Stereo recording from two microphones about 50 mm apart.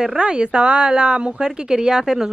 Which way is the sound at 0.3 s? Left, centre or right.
Right.